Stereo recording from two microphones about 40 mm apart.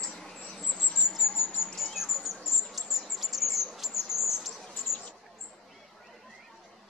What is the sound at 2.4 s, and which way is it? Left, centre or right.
Insect, centre.